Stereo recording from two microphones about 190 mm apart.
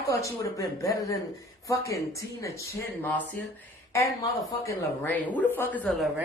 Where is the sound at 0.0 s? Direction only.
15° left (ahead or behind).